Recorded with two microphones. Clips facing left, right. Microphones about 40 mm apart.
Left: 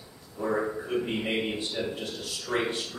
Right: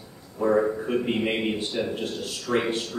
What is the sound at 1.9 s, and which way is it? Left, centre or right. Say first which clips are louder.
Speech: right 5 dB; right.